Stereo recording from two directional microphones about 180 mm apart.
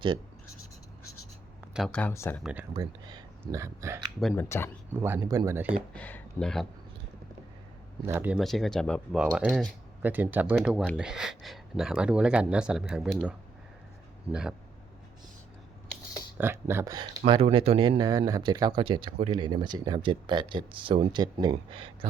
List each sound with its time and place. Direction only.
1.7 s speech: 5° left (ahead or behind)
2.4 s speech: 5° right (ahead or behind)
2.7 s a sound: 25° right (ahead or behind)
3.4 s speech: 15° right (ahead or behind)
4.2 s speech: 5° left (ahead or behind)
4.4 s speech: 15° left (ahead or behind)
4.9 s speech: 10° right (ahead or behind)
5.9 s speech: 10° left (ahead or behind)
8.0 s speech: 10° right (ahead or behind)
8.4 s speech: centre (ahead or behind)
16.4 s speech: 10° right (ahead or behind); by 21.9 s 30° right (ahead or behind)